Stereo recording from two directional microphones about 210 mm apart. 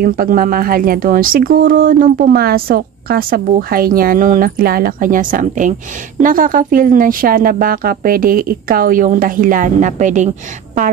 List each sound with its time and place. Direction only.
0.0 s speech: 45° right (ahead or behind)